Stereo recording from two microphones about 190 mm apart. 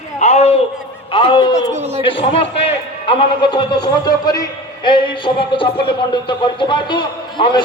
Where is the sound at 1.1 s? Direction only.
25° left (ahead or behind).